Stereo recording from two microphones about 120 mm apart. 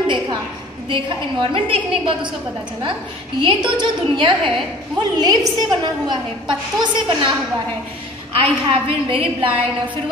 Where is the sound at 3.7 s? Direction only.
40° right (ahead or behind).